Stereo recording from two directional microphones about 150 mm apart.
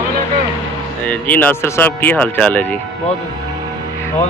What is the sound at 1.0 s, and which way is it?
Speech, 10° left (ahead or behind).